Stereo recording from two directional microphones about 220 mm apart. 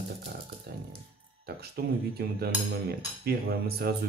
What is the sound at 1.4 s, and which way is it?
Speech, 45° right (ahead or behind).